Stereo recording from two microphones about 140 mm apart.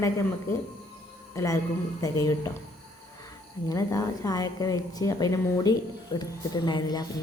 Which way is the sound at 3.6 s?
25° left (ahead or behind).